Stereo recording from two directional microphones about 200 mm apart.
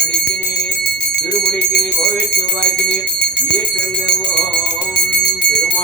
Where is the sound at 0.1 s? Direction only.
55° left (ahead or behind).